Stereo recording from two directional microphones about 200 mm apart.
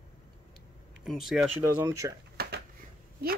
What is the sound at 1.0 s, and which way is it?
Speech, centre (ahead or behind).